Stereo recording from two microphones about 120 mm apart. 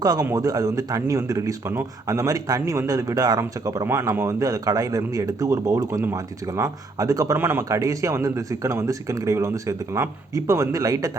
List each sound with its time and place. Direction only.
0.0 s a man's voice: 30° right (ahead or behind)
7.3 s a man's voice: 15° right (ahead or behind)
7.7 s speech: 30° right (ahead or behind)